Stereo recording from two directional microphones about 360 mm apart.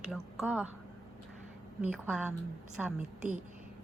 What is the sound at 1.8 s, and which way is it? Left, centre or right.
Speech, centre.